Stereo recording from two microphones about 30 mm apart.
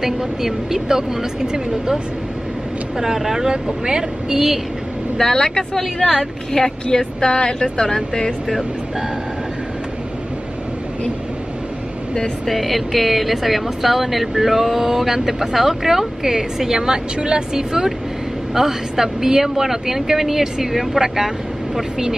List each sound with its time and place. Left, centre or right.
0.0 s speech: centre
3.0 s speech: centre
3.4 s speech: right
5.2 s speech: left
5.8 s a woman's voice: centre
6.5 s speech: left
12.4 s speech: centre